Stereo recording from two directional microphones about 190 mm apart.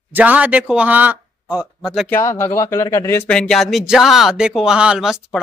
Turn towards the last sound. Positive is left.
turn(degrees=0)  # may be behind; listen again after turning